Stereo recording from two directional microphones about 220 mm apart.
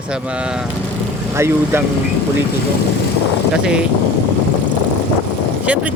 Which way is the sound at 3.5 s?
5° right (ahead or behind).